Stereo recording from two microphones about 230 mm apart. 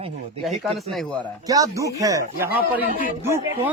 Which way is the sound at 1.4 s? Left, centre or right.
Centre.